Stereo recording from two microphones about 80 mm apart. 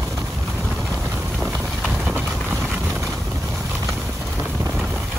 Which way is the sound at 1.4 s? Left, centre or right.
Centre.